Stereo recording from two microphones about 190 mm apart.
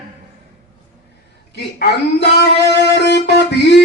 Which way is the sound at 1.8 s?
60° left (ahead or behind).